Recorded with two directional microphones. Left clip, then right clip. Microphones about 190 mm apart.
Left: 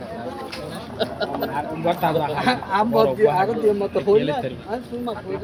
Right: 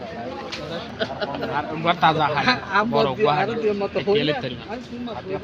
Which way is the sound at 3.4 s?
5° right (ahead or behind).